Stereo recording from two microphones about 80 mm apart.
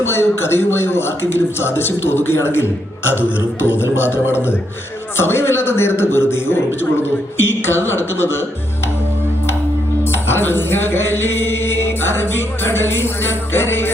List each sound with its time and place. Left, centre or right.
0.0 s a man's voice: left
10.0 s music: left